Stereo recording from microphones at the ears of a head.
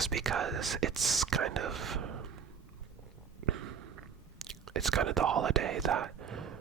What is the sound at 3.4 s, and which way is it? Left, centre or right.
Stomach rumble, right.